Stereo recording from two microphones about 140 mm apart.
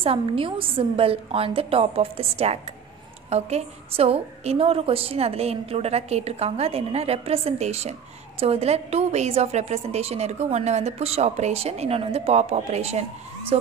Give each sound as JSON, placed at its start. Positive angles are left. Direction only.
{"t": 0.0, "sound": "a woman's voice", "side_deg": -40}